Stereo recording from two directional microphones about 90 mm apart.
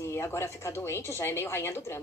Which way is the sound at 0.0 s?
30° left (ahead or behind).